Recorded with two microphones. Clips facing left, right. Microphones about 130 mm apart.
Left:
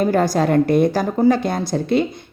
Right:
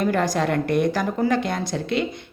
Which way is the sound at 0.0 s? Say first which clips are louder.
Left 4 dB; 40° left (ahead or behind).